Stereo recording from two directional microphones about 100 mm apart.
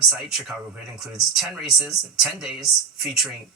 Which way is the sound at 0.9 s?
5° right (ahead or behind).